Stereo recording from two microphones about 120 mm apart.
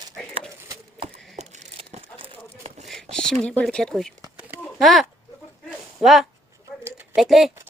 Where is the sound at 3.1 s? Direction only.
5° left (ahead or behind).